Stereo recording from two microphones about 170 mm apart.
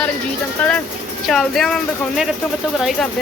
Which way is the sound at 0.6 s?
10° left (ahead or behind).